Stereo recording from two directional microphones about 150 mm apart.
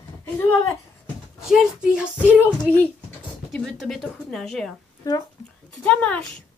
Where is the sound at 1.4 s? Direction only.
5° right (ahead or behind).